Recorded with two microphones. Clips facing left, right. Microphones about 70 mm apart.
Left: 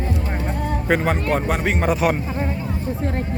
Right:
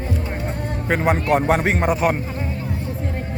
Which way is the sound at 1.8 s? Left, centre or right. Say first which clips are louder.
Even; centre.